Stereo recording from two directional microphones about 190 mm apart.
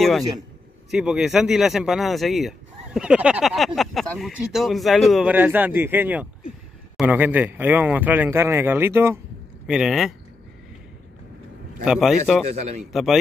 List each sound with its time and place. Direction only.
0.9 s a man's voice: centre (ahead or behind)
9.7 s speech: 5° right (ahead or behind)
11.8 s speech: 5° right (ahead or behind)
12.4 s a man's voice: 35° right (ahead or behind)
12.9 s speech: centre (ahead or behind)